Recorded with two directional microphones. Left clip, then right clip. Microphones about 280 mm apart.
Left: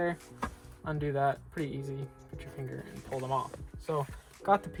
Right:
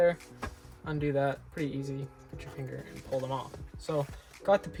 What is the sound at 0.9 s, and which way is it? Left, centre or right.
Speech, centre.